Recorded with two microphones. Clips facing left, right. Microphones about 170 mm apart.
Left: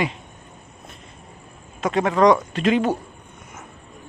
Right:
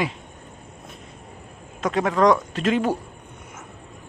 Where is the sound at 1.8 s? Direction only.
Centre (ahead or behind).